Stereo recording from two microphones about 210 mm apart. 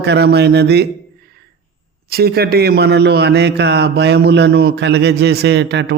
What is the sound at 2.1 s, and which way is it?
A man's voice, 50° right (ahead or behind).